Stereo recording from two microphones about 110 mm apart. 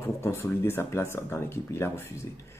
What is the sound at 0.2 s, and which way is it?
Speech, 20° left (ahead or behind).